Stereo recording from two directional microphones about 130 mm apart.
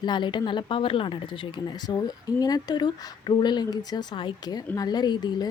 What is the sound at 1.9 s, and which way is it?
A woman's voice, 30° left (ahead or behind).